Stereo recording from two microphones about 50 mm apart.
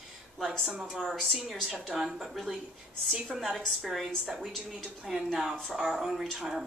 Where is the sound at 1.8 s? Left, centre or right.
Centre.